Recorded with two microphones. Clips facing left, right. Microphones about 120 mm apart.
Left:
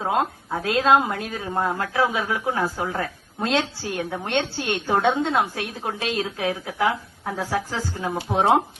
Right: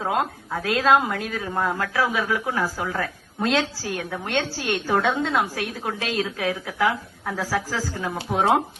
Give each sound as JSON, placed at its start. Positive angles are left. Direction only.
{"t": 0.0, "sound": "a woman's voice", "side_deg": 25}